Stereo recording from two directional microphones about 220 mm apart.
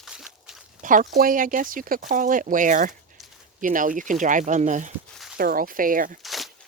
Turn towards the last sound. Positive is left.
turn(degrees=0)  # may be behind; listen again after turning